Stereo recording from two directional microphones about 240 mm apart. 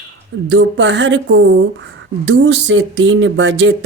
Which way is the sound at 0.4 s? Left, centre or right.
Right.